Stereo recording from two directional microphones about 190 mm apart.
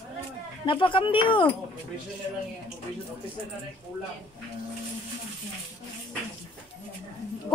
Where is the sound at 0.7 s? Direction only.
25° left (ahead or behind).